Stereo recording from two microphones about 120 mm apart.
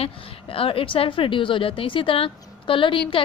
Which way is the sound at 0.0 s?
50° left (ahead or behind).